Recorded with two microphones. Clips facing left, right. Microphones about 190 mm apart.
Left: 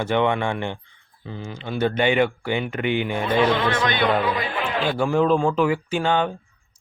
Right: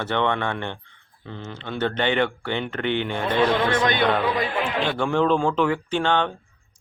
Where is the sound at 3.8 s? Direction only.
45° right (ahead or behind).